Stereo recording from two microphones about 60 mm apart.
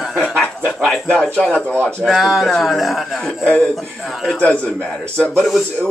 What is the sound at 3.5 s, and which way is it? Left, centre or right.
Speech, centre.